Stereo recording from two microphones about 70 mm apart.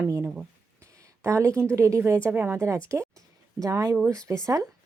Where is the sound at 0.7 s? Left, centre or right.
Right.